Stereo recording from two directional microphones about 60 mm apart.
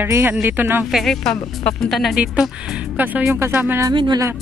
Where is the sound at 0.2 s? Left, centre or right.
Right.